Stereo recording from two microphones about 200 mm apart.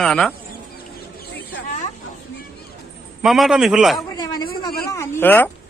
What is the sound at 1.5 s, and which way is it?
Snake, 40° left (ahead or behind).